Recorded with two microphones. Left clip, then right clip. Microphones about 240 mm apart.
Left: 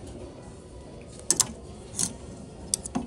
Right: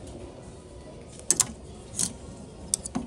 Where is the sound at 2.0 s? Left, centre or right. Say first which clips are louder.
Even; centre.